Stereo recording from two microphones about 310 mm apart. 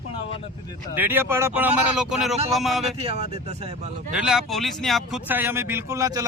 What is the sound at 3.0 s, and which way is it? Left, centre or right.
Speech, centre.